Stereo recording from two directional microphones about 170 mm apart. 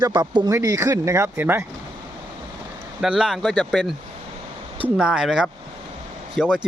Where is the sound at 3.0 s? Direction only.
5° right (ahead or behind).